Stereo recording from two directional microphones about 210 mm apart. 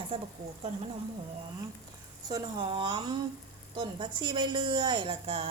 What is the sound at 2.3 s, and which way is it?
A woman's voice, 25° right (ahead or behind).